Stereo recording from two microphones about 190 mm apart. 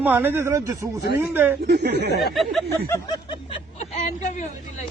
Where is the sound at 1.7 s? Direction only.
60° right (ahead or behind).